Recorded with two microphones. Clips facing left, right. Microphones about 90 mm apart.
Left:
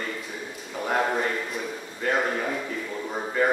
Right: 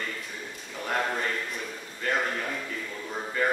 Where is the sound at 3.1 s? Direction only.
15° left (ahead or behind).